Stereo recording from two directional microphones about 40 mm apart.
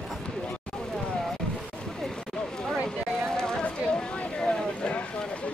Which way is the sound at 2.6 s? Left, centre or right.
Centre.